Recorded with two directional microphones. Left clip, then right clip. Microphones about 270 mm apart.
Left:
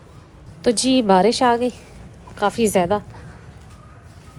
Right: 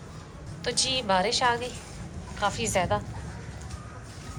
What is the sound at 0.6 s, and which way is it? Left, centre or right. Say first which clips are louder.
A woman's voice: left 9 dB; centre.